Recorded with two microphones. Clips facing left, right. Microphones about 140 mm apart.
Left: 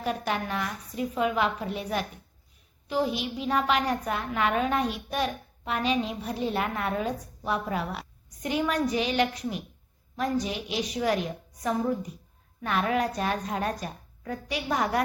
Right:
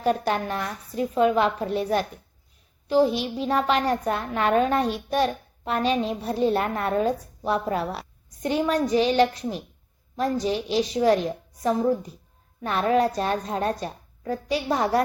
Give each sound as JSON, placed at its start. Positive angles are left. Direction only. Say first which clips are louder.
{"t": 0.0, "sound": "a woman's voice", "louder": "right 6 dB", "side_deg": -35}